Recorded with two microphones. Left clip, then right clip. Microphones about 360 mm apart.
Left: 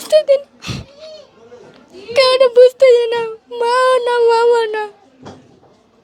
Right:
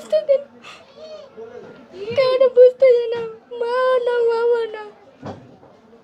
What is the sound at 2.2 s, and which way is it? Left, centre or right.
Child singing, left.